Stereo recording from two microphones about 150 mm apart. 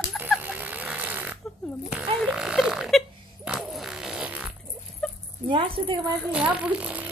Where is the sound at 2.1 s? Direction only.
Centre (ahead or behind).